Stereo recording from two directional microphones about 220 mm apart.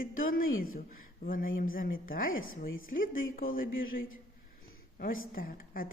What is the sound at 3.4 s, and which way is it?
Speech, 40° left (ahead or behind).